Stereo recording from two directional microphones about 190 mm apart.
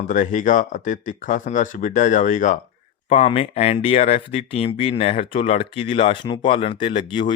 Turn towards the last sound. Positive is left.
turn(degrees=25)  # may be behind; listen again after turning